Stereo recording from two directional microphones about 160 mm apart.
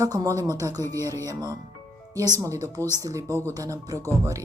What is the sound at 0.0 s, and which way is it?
Speech, 20° right (ahead or behind).